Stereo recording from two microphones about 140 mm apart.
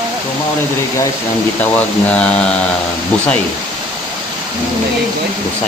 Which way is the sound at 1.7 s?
10° left (ahead or behind).